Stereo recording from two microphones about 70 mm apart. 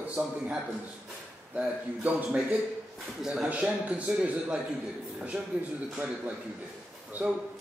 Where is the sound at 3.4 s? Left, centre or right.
Centre.